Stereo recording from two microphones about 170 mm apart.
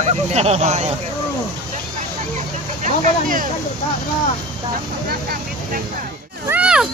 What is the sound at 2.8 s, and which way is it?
Speech, 50° right (ahead or behind).